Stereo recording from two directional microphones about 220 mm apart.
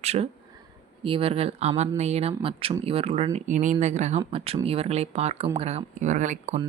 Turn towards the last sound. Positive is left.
turn(degrees=-35)  # may be behind; listen again after turning